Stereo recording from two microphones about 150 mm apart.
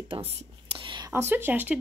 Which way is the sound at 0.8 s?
30° right (ahead or behind).